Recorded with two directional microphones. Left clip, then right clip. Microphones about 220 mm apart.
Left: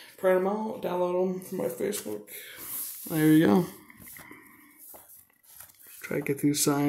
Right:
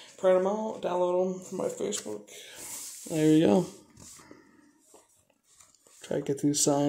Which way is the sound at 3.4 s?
10° left (ahead or behind).